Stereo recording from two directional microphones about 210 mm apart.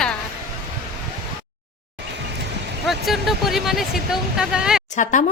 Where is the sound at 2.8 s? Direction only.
Centre (ahead or behind).